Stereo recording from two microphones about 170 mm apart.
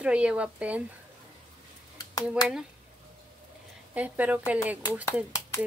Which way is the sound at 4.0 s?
10° right (ahead or behind).